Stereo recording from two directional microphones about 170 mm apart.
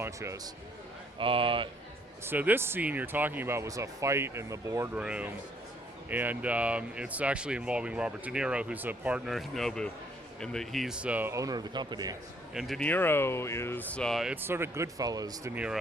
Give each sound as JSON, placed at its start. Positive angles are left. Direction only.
{"t": 0.0, "sound": "speech", "side_deg": -15}
{"t": 1.2, "sound": "speech", "side_deg": -30}
{"t": 2.2, "sound": "speech", "side_deg": -10}
{"t": 12.5, "sound": "speech", "side_deg": 0}
{"t": 14.4, "sound": "speech", "side_deg": -15}
{"t": 15.5, "sound": "speech", "side_deg": -5}